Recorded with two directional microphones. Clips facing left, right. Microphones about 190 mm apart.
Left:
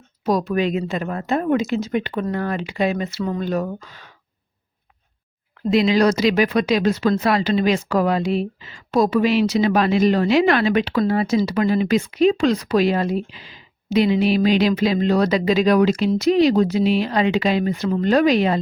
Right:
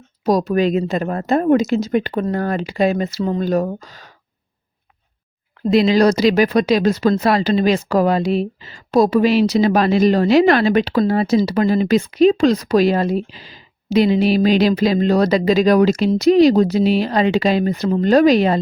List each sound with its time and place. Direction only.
0.3 s speech: 40° right (ahead or behind)
5.7 s speech: 40° right (ahead or behind)